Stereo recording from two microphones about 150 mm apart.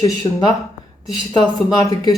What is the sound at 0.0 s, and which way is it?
Speech, 25° left (ahead or behind).